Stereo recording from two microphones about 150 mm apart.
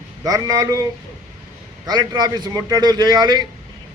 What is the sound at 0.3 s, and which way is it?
Speech, 25° right (ahead or behind).